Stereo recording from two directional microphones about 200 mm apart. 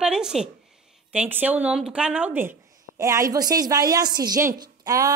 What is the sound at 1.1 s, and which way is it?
A woman's voice, 5° right (ahead or behind).